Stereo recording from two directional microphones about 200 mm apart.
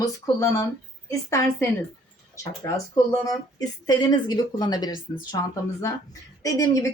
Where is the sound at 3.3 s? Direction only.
20° left (ahead or behind).